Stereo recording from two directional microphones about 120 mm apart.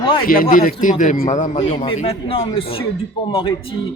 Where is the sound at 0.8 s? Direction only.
90° left.